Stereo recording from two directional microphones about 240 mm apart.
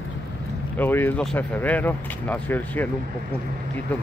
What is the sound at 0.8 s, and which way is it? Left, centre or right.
Speech, centre.